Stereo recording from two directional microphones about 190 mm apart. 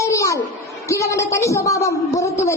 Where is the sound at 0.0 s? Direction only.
15° left (ahead or behind).